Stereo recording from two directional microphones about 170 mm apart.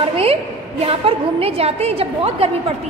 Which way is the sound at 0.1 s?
35° right (ahead or behind).